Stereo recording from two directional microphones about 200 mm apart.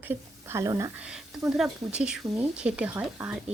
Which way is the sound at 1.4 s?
5° right (ahead or behind).